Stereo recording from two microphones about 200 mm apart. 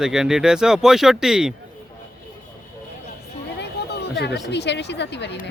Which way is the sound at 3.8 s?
55° left (ahead or behind).